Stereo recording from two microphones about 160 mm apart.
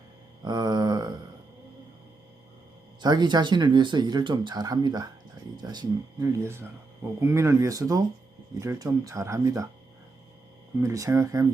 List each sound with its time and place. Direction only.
0.4 s a sound: 25° right (ahead or behind)
3.0 s speech: 25° right (ahead or behind)
10.8 s speech: 20° right (ahead or behind)